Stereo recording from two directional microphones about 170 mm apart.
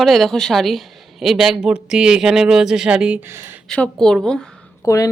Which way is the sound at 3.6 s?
5° left (ahead or behind).